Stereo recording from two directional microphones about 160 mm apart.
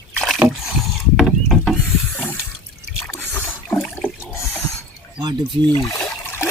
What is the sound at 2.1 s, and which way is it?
Water, 10° left (ahead or behind).